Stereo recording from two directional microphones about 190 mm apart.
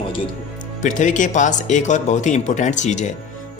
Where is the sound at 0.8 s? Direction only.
40° left (ahead or behind).